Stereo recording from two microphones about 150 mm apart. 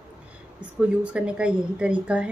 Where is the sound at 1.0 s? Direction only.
5° right (ahead or behind).